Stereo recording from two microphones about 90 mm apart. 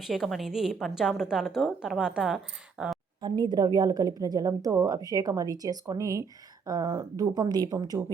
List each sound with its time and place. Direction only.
0.0 s a woman's voice: centre (ahead or behind)
3.2 s speech: 55° right (ahead or behind)